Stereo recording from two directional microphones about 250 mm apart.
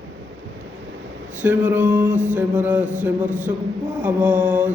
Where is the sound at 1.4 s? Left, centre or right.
Centre.